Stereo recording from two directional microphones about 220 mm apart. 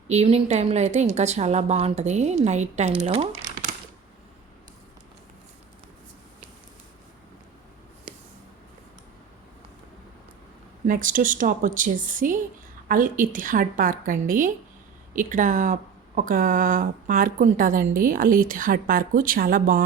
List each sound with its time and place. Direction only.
0.1 s speech: 30° right (ahead or behind)
3.0 s crumpling: 30° right (ahead or behind)
10.8 s speech: 40° right (ahead or behind)